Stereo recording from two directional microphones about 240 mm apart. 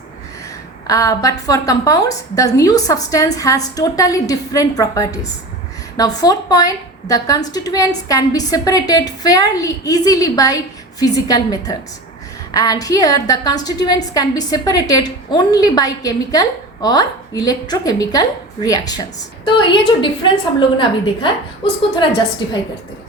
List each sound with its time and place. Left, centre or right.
0.4 s a woman's voice: centre